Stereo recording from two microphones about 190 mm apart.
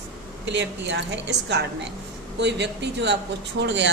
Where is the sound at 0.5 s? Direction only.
70° right (ahead or behind).